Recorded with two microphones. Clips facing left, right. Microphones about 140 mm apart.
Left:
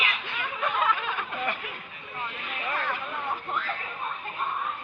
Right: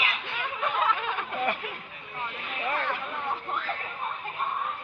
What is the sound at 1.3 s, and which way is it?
Snicker, 40° right (ahead or behind).